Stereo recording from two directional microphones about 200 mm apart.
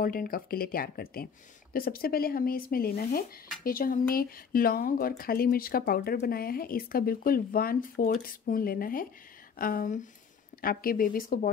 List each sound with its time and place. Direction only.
0.0 s speech: 45° left (ahead or behind)